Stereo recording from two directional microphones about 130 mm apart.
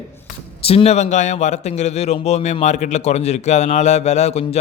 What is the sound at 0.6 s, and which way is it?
A man's voice, 50° left (ahead or behind).